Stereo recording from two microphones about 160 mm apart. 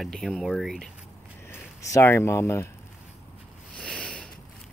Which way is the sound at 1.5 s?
20° left (ahead or behind).